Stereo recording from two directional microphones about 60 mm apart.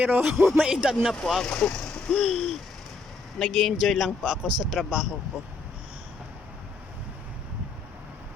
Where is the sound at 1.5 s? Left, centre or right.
Centre.